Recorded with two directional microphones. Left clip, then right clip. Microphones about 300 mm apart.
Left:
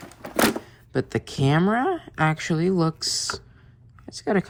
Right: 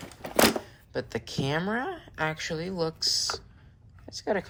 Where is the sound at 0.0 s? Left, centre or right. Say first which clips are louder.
Left 1 dB; centre.